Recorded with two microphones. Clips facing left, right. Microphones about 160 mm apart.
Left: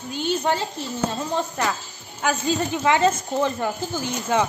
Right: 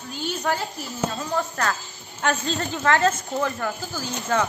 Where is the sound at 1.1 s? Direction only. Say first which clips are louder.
Left 1 dB; 20° left (ahead or behind).